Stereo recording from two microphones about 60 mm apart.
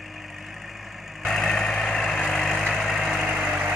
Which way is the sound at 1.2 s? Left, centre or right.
Centre.